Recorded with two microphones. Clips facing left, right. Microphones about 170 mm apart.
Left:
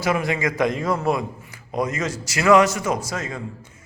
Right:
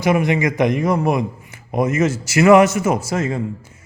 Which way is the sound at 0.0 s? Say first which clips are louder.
Right 5 dB; 20° right (ahead or behind).